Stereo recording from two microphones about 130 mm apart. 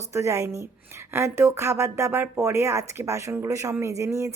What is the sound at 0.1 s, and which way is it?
Speech, 25° right (ahead or behind).